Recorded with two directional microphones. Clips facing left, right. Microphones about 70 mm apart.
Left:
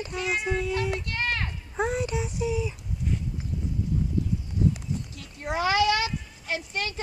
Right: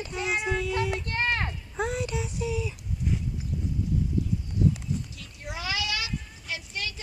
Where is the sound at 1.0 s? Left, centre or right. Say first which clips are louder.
Right 2 dB; right.